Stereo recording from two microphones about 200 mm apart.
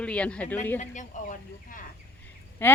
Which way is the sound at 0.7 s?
35° left (ahead or behind).